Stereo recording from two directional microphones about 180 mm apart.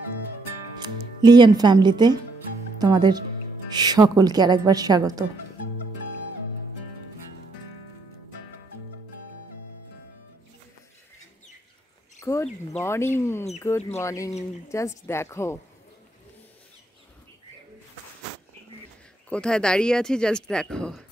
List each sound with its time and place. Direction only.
0.8 s a woman's voice: 25° right (ahead or behind)
12.2 s a sound: 15° left (ahead or behind)
13.6 s speech: 15° left (ahead or behind)
19.2 s speech: 5° left (ahead or behind)